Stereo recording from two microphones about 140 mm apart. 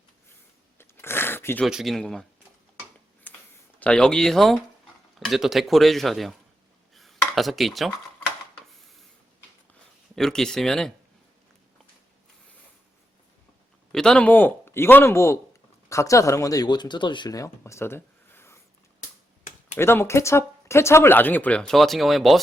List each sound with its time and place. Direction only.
0.8 s a sound: 15° left (ahead or behind)
1.6 s speech: centre (ahead or behind)
3.3 s a sound: 15° left (ahead or behind)
3.8 s speech: 5° left (ahead or behind)
6.9 s dishes: centre (ahead or behind)
10.2 s speech: 5° left (ahead or behind)
13.9 s speech: 5° left (ahead or behind)
19.7 s speech: 15° left (ahead or behind); by 22.4 s centre (ahead or behind)